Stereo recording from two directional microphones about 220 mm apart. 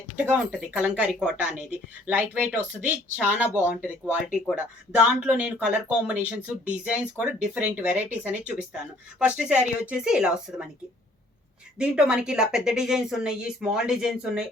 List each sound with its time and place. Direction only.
0.3 s speech: 5° right (ahead or behind)
11.8 s speech: 5° right (ahead or behind)